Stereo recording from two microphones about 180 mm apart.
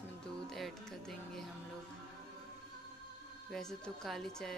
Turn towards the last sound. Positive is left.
turn(degrees=0)  # may be behind; listen again after turning